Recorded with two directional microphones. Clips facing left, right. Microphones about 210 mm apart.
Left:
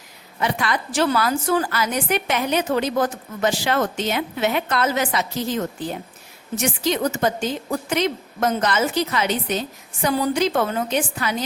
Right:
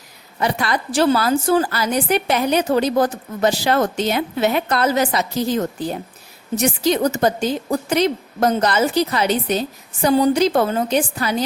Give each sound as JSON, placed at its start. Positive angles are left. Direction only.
{"t": 0.3, "sound": "a woman's voice", "side_deg": -35}